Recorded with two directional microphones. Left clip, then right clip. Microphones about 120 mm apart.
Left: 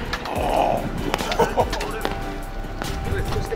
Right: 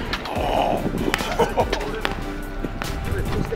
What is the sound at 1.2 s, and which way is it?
Music, 10° left (ahead or behind).